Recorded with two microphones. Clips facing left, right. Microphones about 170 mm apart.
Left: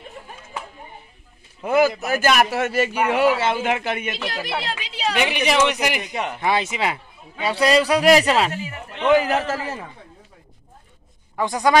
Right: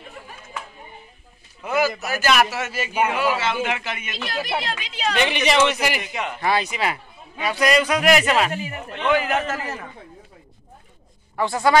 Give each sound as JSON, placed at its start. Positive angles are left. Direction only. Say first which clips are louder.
{"t": 1.7, "sound": "a man's voice", "louder": "left 4 dB", "side_deg": 50}
{"t": 4.3, "sound": "speech", "louder": "right 6 dB", "side_deg": -15}
{"t": 5.1, "sound": "a man's voice", "louder": "even", "side_deg": 10}
{"t": 11.3, "sound": "speech", "louder": "even", "side_deg": 15}